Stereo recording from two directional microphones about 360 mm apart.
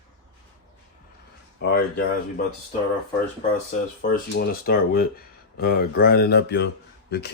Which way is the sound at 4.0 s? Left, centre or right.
Left.